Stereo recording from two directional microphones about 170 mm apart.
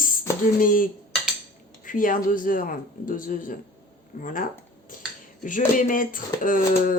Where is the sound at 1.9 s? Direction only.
55° left (ahead or behind).